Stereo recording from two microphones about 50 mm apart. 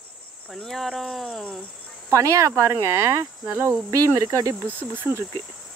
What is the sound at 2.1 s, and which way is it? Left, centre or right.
Speech, right.